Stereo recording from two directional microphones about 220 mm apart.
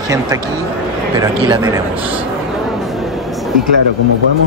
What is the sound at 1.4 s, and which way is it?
Speech, 20° right (ahead or behind).